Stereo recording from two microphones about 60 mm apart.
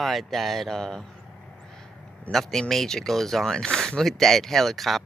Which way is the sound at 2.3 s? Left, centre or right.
Left.